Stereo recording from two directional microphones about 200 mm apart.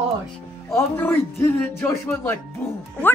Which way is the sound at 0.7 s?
10° left (ahead or behind).